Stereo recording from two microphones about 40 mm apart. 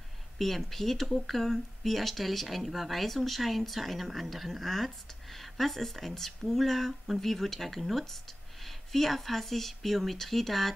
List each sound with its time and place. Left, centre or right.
0.4 s speech: centre